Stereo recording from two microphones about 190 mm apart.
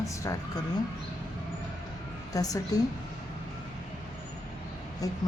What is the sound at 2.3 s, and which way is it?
Speech, 20° left (ahead or behind).